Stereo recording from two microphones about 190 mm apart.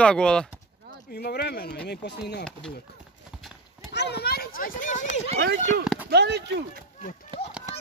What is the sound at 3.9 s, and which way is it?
Clip-clop, 60° left (ahead or behind).